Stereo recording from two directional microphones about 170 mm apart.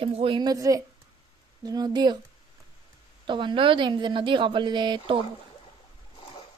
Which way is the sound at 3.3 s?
30° right (ahead or behind).